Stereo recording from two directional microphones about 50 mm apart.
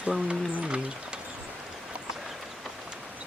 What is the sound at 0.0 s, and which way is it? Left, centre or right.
Speech, right.